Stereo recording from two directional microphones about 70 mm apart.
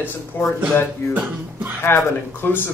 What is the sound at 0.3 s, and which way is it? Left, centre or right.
Speech, left.